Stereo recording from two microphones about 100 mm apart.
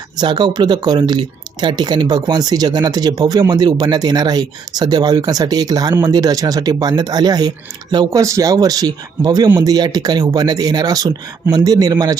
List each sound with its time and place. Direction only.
0.2 s speech: 50° right (ahead or behind)
8.2 s speech: 30° right (ahead or behind)